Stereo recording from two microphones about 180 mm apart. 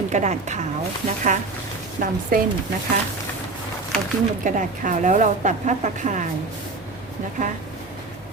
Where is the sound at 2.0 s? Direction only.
45° right (ahead or behind).